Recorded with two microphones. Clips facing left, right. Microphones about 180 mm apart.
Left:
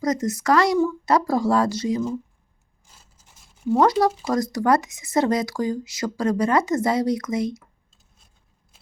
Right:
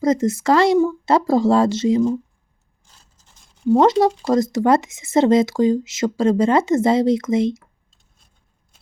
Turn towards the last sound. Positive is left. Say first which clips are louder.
# right 6 dB
turn(degrees=-25)  # may be behind; listen again after turning